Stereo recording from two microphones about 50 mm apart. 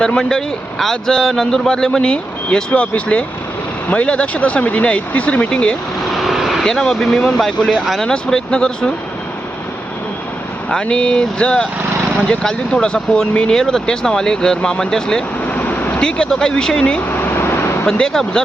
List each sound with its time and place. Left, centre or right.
0.2 s speech: centre
6.1 s vehicle: centre
6.7 s speech: centre
10.7 s speech: centre
15.4 s vehicle: left
16.0 s speech: centre
17.1 s vehicle: left
17.8 s speech: centre